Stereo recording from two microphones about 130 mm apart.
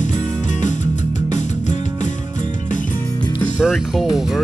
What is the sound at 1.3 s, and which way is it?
Music, 70° left (ahead or behind).